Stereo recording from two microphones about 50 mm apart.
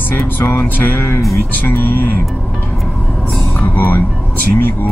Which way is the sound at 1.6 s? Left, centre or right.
Left.